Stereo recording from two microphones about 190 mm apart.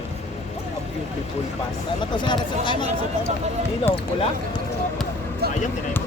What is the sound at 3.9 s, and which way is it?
Speech, 10° left (ahead or behind).